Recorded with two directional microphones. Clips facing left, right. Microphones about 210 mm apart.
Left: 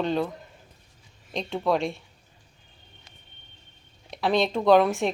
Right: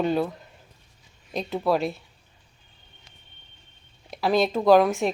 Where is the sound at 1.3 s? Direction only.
5° right (ahead or behind).